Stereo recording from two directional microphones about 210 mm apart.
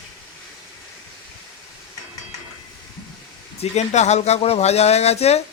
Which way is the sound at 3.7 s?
30° left (ahead or behind).